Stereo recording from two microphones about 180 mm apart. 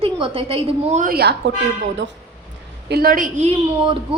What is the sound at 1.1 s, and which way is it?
Speech, 65° right (ahead or behind).